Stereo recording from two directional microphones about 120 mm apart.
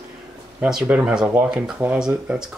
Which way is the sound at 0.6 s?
5° right (ahead or behind).